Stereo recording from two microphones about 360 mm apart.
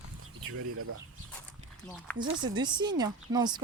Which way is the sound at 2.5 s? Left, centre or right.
Centre.